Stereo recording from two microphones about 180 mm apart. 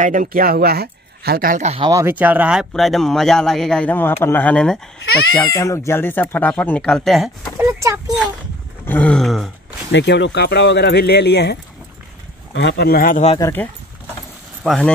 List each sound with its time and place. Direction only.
0.0 s speech: 45° right (ahead or behind)
1.9 s speech: 15° right (ahead or behind); by 7.2 s centre (ahead or behind)
7.5 s speech: 15° right (ahead or behind)
8.8 s speech: 10° left (ahead or behind)
9.8 s speech: 70° left (ahead or behind)
12.5 s speech: 65° left (ahead or behind)
13.4 s speech: 10° left (ahead or behind)
14.6 s speech: centre (ahead or behind)